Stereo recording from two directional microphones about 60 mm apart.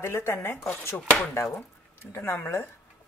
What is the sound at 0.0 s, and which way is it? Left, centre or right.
Speech, left.